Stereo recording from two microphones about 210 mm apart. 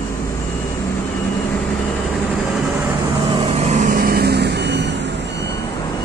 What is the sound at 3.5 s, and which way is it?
Vehicle, 30° right (ahead or behind).